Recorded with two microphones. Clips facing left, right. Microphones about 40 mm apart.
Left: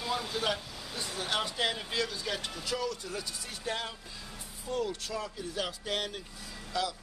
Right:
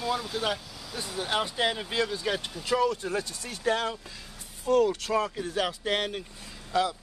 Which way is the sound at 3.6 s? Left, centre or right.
Right.